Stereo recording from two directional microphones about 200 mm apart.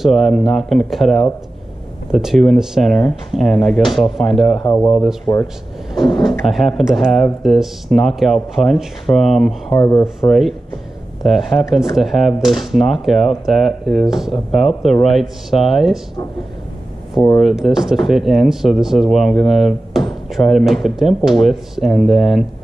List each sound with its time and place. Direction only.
0.0 s speech: centre (ahead or behind)
4.6 s speech: 20° left (ahead or behind)
6.4 s speech: centre (ahead or behind)
9.8 s speech: 15° left (ahead or behind)
11.2 s speech: centre (ahead or behind)
17.4 s speech: centre (ahead or behind)